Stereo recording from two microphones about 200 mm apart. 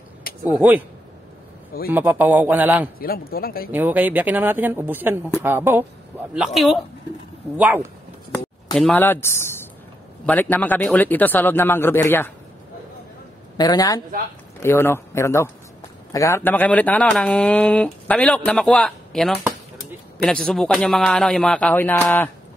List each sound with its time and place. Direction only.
0.5 s speech: 10° right (ahead or behind)
1.9 s speech: 10° right (ahead or behind)
3.0 s speech: 50° left (ahead or behind)
3.7 s speech: 10° right (ahead or behind)
8.7 s speech: 5° left (ahead or behind)
13.6 s a woman's voice: 20° left (ahead or behind); by 19.3 s centre (ahead or behind)
20.4 s a man's voice: 5° left (ahead or behind)